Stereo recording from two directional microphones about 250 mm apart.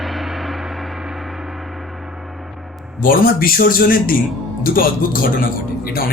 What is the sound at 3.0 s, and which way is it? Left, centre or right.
Speech, left.